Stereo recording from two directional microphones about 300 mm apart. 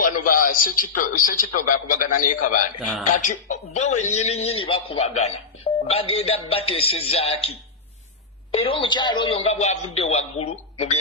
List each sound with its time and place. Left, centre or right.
0.0 s a sound: left
0.5 s a man's voice: left
8.6 s a man's voice: centre